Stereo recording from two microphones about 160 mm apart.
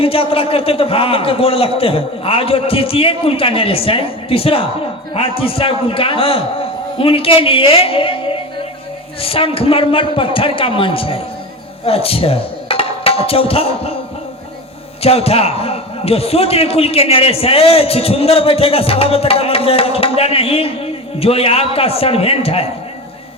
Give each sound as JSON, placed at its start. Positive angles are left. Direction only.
{"t": 0.0, "sound": "a man's voice", "side_deg": 35}
{"t": 9.2, "sound": "a man's voice", "side_deg": 35}
{"t": 15.0, "sound": "a man's voice", "side_deg": 40}